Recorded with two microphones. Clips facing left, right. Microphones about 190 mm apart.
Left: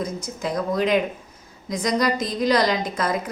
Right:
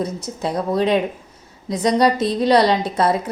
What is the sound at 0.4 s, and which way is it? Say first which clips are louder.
A woman's voice: right 3 dB; 30° right (ahead or behind).